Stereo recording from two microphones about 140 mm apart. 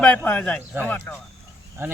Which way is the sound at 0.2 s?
10° left (ahead or behind).